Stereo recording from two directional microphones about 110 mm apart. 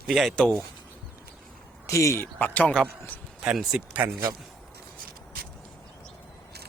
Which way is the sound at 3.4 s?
5° right (ahead or behind).